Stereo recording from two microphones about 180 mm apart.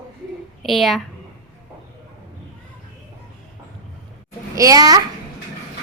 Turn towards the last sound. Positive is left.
turn(degrees=-20)  # may be behind; listen again after turning